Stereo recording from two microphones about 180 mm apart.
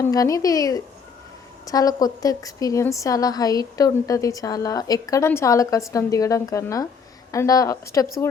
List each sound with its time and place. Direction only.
0.0 s a woman's voice: 20° left (ahead or behind)